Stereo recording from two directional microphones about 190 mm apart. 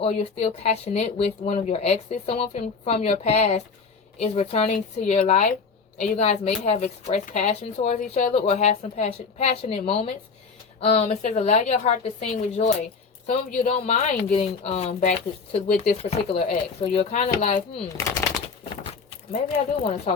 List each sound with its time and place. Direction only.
0.0 s speech: 30° left (ahead or behind)
17.9 s speech: 15° left (ahead or behind)
19.3 s speech: 30° left (ahead or behind)